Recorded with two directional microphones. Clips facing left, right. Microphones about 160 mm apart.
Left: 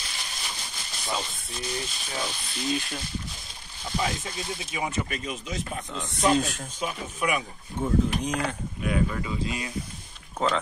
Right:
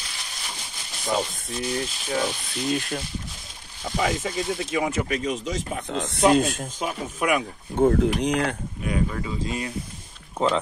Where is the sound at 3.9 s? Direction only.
85° right; by 6.7 s 55° right (ahead or behind).